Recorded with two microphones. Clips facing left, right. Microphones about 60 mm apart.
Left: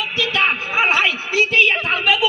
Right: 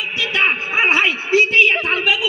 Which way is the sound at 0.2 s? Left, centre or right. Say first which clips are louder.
Right 1 dB; right.